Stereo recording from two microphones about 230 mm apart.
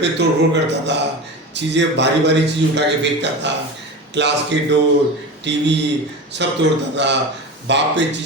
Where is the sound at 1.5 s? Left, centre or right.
Right.